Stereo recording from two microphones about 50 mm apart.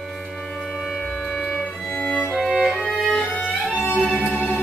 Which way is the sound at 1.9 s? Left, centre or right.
Centre.